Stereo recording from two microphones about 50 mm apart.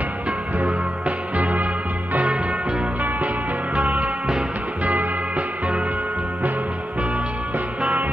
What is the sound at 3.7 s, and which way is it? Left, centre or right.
Music, right.